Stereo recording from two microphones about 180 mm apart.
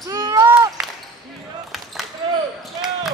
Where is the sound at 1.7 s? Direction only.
Centre (ahead or behind).